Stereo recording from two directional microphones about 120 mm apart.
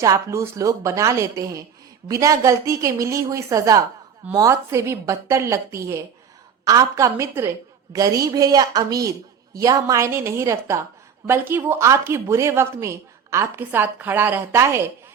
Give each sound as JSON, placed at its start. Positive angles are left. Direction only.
{"t": 0.0, "sound": "speech", "side_deg": -25}